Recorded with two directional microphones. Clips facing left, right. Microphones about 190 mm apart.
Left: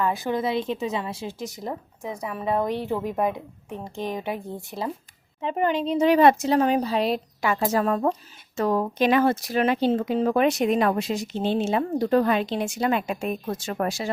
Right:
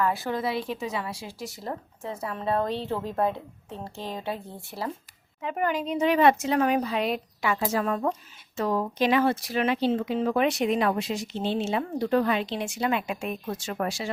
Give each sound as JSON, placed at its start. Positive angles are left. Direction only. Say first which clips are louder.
{"t": 0.0, "sound": "speech", "louder": "left 2 dB", "side_deg": 20}
{"t": 8.5, "sound": "speech", "louder": "left 3 dB", "side_deg": 50}